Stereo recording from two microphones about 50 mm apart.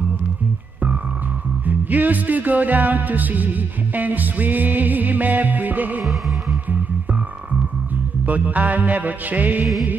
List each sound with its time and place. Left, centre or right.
1.7 s music: right
8.3 s music: right